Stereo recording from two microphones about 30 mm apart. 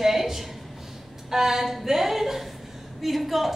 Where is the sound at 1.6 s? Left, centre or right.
Centre.